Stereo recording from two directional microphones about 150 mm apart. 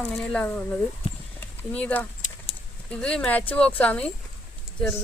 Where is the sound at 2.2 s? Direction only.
55° left (ahead or behind).